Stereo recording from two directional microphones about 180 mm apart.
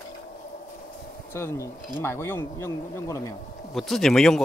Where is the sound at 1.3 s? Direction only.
15° left (ahead or behind).